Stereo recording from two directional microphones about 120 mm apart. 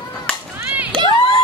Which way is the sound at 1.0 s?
40° right (ahead or behind).